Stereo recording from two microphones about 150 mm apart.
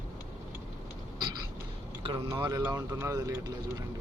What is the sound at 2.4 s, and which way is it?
Speech, 20° right (ahead or behind).